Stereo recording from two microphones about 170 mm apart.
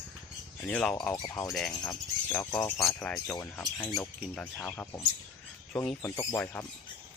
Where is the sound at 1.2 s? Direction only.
20° left (ahead or behind).